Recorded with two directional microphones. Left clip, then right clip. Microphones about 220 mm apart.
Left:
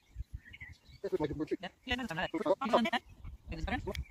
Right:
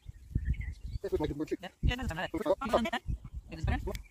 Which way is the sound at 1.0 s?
45° right (ahead or behind).